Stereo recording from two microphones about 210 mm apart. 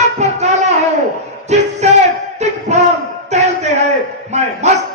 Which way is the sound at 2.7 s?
35° right (ahead or behind).